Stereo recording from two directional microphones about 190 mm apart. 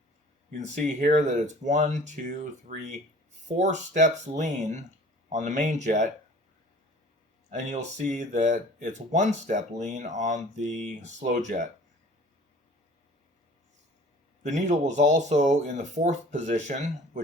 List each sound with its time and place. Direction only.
0.5 s speech: 40° right (ahead or behind)
7.5 s speech: 40° right (ahead or behind)
14.4 s speech: 40° right (ahead or behind)